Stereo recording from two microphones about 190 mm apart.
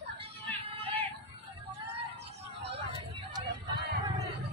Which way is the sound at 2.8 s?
25° right (ahead or behind).